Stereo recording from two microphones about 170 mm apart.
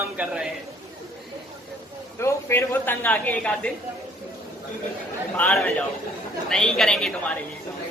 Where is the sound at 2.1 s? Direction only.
15° left (ahead or behind).